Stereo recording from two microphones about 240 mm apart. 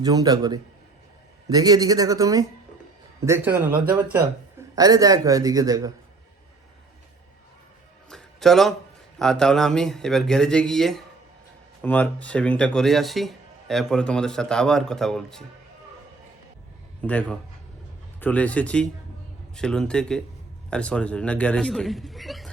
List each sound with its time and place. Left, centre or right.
0.0 s a man's voice: centre
8.1 s music: centre
9.1 s speech: centre
17.0 s speech: centre